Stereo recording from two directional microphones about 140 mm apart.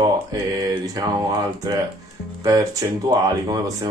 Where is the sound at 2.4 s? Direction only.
25° right (ahead or behind).